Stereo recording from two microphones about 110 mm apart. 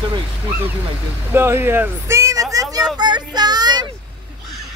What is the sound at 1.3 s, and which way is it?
Speech, 20° right (ahead or behind).